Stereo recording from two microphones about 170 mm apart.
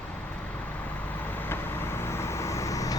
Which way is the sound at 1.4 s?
15° left (ahead or behind).